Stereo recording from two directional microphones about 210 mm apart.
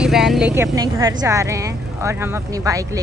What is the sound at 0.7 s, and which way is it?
Speech, 15° right (ahead or behind).